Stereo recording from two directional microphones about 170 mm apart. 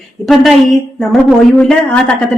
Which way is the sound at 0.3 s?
Centre (ahead or behind).